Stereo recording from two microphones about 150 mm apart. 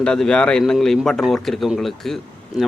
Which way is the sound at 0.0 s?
5° left (ahead or behind).